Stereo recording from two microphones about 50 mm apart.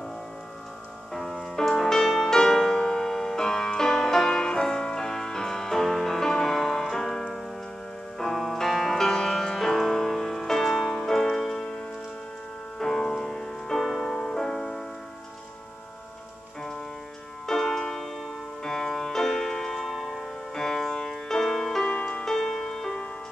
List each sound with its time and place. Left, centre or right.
1.1 s music: centre
12.7 s music: centre
17.5 s music: centre
21.9 s music: left
22.2 s music: centre